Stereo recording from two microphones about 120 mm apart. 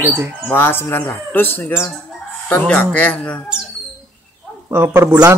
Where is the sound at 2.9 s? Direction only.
10° left (ahead or behind).